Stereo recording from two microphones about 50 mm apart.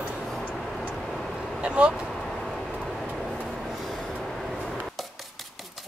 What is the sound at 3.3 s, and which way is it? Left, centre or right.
Vehicle, centre.